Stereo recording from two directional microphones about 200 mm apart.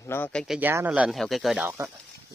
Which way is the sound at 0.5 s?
10° right (ahead or behind).